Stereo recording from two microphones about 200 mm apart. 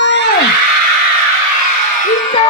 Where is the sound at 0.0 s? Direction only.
60° left (ahead or behind).